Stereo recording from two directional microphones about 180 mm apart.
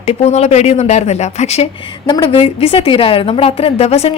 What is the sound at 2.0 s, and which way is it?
A woman's voice, 25° left (ahead or behind).